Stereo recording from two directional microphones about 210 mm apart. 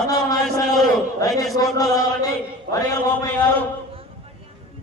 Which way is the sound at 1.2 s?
15° left (ahead or behind).